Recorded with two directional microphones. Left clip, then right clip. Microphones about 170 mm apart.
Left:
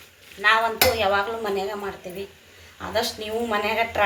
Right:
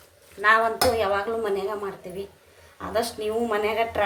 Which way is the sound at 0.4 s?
45° right (ahead or behind).